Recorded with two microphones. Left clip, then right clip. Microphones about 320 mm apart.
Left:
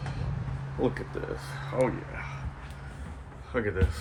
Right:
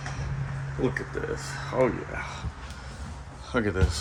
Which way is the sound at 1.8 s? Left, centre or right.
Centre.